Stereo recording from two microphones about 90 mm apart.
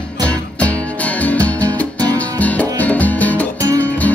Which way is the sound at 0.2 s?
15° left (ahead or behind).